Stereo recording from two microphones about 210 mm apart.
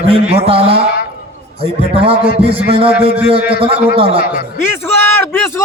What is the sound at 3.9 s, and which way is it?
Speech, 25° right (ahead or behind).